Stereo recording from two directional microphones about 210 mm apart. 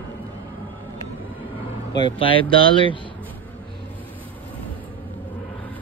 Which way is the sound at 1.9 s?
25° left (ahead or behind).